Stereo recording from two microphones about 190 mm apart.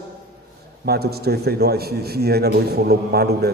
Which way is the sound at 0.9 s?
55° right (ahead or behind).